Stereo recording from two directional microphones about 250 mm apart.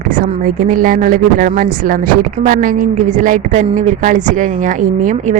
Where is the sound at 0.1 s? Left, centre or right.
Right.